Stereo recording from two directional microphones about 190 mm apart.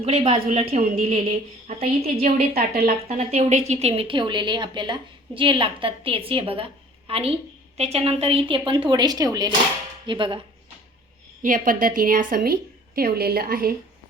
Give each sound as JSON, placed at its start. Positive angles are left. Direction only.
{"t": 0.0, "sound": "a woman's voice", "side_deg": -30}
{"t": 11.4, "sound": "a woman's voice", "side_deg": -45}